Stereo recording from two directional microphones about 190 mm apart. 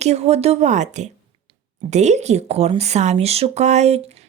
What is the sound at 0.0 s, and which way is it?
Speech, 35° right (ahead or behind).